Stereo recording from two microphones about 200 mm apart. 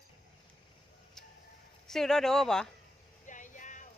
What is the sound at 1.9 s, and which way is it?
Speech, centre (ahead or behind).